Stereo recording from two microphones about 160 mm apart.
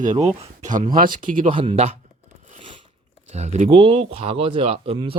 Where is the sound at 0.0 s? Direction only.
50° right (ahead or behind).